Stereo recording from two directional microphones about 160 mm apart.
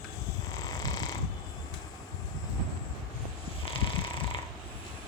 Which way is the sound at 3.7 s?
35° left (ahead or behind).